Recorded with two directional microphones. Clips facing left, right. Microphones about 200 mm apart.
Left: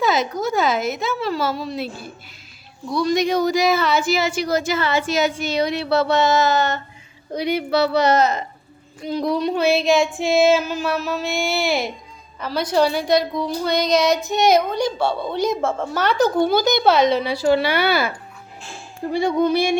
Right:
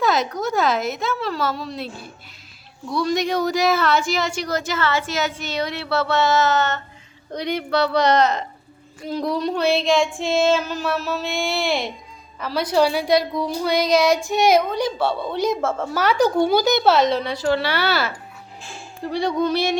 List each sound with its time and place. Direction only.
0.0 s a woman's voice: centre (ahead or behind)
19.1 s speech: 10° left (ahead or behind)